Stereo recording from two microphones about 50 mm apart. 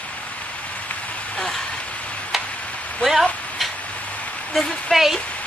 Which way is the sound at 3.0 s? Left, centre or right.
Centre.